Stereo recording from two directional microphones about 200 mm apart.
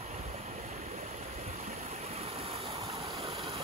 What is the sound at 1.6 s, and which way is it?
Stream, 35° right (ahead or behind).